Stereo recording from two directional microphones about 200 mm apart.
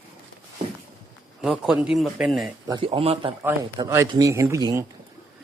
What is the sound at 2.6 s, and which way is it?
Speech, 25° right (ahead or behind).